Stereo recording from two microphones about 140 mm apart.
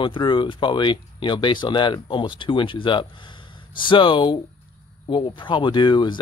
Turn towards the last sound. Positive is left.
turn(degrees=35)  # may be behind; listen again after turning